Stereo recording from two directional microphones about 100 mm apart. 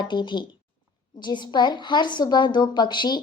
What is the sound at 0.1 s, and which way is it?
A woman's voice, 50° left (ahead or behind).